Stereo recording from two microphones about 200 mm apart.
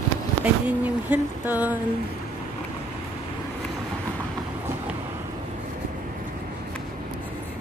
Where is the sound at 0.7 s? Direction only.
10° right (ahead or behind).